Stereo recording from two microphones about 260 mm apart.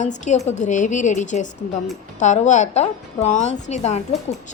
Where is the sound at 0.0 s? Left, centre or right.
Left.